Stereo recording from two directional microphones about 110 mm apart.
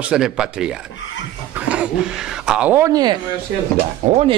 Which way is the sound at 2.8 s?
35° right (ahead or behind).